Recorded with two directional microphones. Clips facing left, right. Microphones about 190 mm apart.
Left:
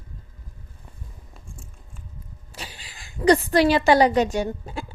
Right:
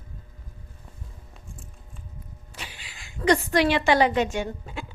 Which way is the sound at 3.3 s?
35° left (ahead or behind).